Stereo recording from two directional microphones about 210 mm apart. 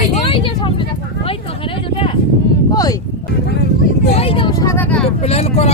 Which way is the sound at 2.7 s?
15° left (ahead or behind).